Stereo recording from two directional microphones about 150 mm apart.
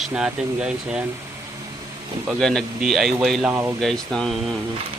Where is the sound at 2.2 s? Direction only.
5° left (ahead or behind).